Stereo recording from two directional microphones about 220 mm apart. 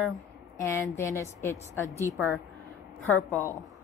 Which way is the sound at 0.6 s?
15° left (ahead or behind).